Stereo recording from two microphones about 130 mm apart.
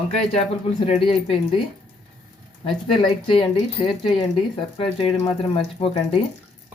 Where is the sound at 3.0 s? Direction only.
40° left (ahead or behind).